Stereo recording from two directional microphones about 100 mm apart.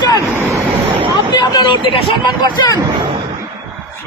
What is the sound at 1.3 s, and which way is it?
Speech, 50° left (ahead or behind).